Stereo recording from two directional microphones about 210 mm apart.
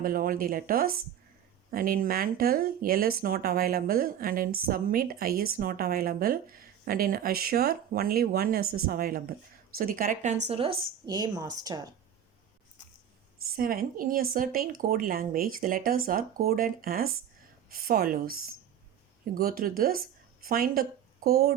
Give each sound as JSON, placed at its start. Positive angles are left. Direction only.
{"t": 0.0, "sound": "a woman's voice", "side_deg": -45}
{"t": 10.4, "sound": "a woman's voice", "side_deg": -30}
{"t": 13.6, "sound": "speech", "side_deg": -45}